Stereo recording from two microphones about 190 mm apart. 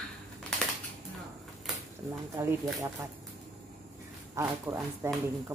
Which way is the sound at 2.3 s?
15° right (ahead or behind).